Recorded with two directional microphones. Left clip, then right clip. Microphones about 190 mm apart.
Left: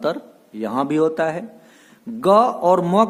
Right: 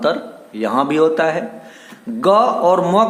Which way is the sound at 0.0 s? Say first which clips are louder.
Right 5 dB; 45° left (ahead or behind).